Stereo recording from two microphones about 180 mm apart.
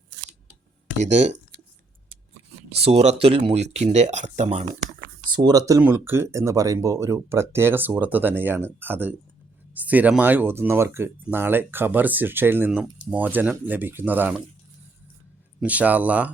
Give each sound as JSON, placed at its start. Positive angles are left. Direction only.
{"t": 0.9, "sound": "speech", "side_deg": -40}
{"t": 2.7, "sound": "speech", "side_deg": -35}
{"t": 4.9, "sound": "computer keyboard", "side_deg": -55}
{"t": 5.4, "sound": "speech", "side_deg": -20}
{"t": 15.6, "sound": "speech", "side_deg": -10}